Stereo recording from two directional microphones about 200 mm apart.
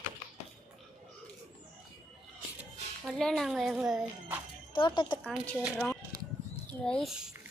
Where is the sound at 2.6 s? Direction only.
Centre (ahead or behind).